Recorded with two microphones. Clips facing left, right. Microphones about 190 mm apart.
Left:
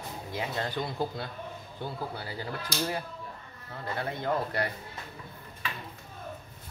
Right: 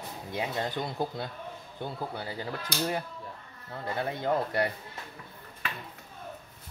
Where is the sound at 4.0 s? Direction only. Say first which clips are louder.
Right 2 dB; 20° right (ahead or behind).